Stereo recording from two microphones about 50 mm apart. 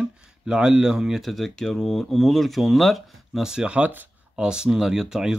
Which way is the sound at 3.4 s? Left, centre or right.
Centre.